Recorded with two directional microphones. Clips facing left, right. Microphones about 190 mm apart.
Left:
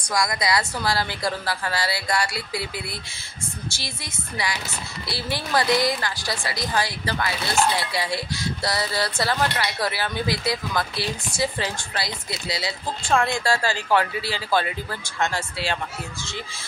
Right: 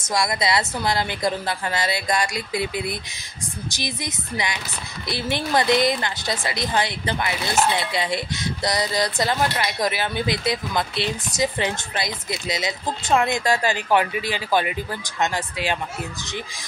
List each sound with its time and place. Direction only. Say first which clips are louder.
0.1 s a woman's voice: right 1 dB; 25° right (ahead or behind)